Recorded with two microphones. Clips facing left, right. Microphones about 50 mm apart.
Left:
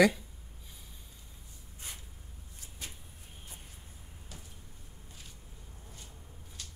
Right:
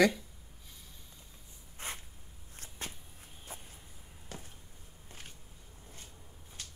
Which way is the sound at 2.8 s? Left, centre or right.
Right.